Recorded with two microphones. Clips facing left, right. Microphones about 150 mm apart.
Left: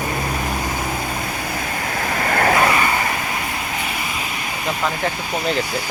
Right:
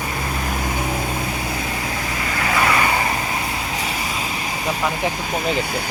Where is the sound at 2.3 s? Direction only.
55° left (ahead or behind).